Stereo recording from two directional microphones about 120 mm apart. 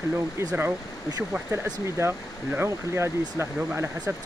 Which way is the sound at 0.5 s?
15° right (ahead or behind).